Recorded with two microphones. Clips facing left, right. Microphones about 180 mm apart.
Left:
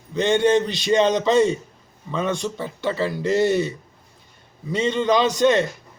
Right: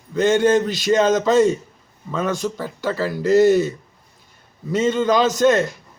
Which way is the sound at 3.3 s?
40° right (ahead or behind).